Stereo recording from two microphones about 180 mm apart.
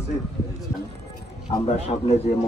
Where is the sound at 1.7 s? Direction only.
35° left (ahead or behind).